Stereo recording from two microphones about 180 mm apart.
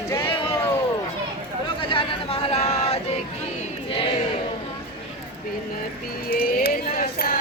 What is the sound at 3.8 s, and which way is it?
Choir, 30° left (ahead or behind).